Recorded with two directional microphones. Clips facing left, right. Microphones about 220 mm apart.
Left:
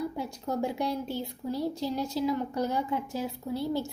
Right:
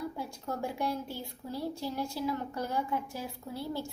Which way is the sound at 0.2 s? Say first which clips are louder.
Left 5 dB; 20° left (ahead or behind).